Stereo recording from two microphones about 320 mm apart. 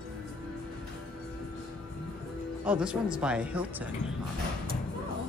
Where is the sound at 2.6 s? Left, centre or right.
Centre.